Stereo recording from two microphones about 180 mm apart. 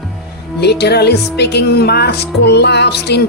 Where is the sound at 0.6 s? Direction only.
65° left (ahead or behind).